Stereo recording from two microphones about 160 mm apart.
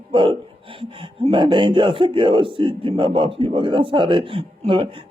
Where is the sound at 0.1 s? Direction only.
30° right (ahead or behind).